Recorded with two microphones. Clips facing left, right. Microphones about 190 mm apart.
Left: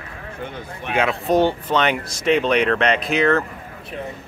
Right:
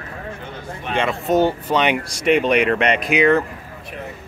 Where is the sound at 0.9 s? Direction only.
Centre (ahead or behind).